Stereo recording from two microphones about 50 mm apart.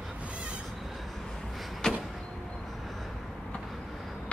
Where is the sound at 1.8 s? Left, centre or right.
Centre.